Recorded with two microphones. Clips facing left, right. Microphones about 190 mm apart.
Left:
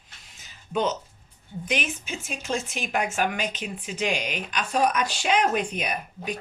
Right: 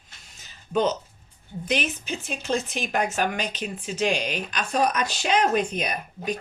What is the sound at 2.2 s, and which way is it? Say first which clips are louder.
Speech: right 3 dB; 35° right (ahead or behind).